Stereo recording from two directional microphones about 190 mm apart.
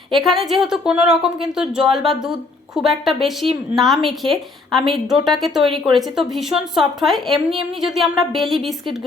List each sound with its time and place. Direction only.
0.1 s a woman's voice: centre (ahead or behind)
3.4 s speech: 30° right (ahead or behind)
3.8 s a woman's voice: centre (ahead or behind)